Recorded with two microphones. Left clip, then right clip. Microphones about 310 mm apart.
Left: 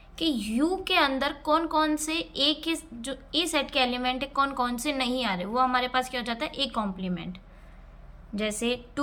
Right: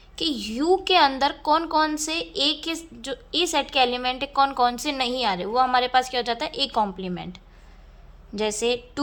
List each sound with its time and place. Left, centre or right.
0.2 s a woman's voice: centre